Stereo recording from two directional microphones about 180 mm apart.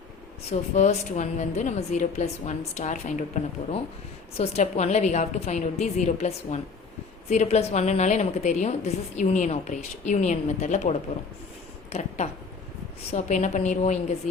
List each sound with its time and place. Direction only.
0.8 s a woman's voice: 40° left (ahead or behind)